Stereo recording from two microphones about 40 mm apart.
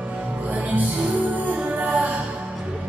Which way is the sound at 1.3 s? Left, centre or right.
Right.